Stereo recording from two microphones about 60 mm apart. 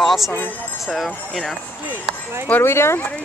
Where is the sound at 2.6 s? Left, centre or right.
Left.